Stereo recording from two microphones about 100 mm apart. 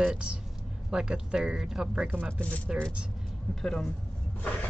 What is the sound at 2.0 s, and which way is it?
Speech, 20° right (ahead or behind).